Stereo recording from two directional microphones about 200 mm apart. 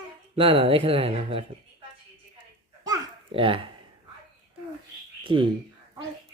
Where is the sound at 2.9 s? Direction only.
25° right (ahead or behind).